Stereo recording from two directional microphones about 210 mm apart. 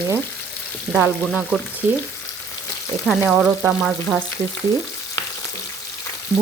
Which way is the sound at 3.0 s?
Centre (ahead or behind).